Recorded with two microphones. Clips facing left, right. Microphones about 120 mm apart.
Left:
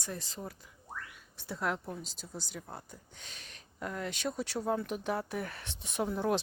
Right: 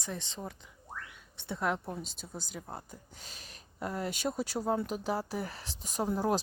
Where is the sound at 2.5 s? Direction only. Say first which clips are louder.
Right 2 dB; 10° right (ahead or behind).